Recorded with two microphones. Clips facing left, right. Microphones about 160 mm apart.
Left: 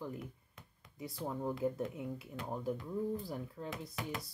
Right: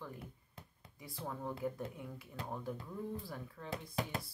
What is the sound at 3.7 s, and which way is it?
Speech, 30° right (ahead or behind).